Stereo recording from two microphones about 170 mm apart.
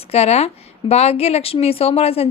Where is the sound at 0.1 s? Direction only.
35° left (ahead or behind).